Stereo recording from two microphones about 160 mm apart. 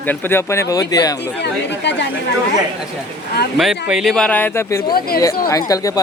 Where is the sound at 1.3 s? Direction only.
90° left.